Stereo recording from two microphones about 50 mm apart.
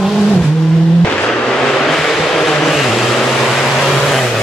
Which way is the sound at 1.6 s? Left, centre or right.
Centre.